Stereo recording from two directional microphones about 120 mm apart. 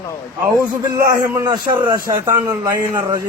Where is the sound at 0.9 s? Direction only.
30° right (ahead or behind).